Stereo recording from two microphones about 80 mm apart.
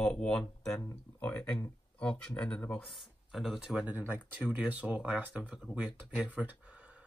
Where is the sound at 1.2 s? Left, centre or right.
Left.